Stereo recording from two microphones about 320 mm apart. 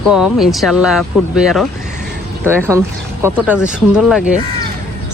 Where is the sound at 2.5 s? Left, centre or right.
Centre.